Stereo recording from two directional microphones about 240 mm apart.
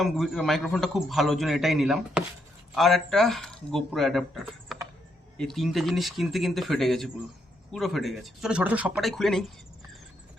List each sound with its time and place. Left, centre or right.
0.0 s a man's voice: centre